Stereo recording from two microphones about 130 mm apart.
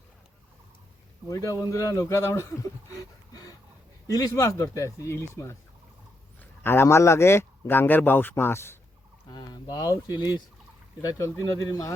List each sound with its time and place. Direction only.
1.3 s speech: 25° left (ahead or behind)
4.0 s speech: 25° left (ahead or behind)
9.3 s speech: 30° left (ahead or behind)